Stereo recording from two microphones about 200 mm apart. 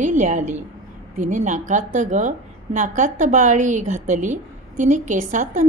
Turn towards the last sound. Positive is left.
turn(degrees=-40)  # may be behind; listen again after turning